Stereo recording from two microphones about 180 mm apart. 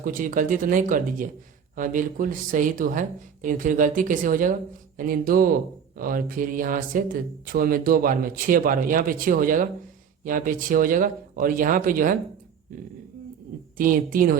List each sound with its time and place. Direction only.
0.0 s speech: 50° right (ahead or behind)
13.7 s speech: 50° right (ahead or behind)